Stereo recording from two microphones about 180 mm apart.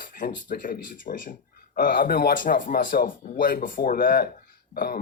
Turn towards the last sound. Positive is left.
turn(degrees=55)  # may be behind; listen again after turning